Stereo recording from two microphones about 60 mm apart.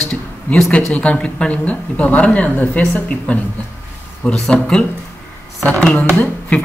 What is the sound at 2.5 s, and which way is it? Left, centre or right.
Speech, left.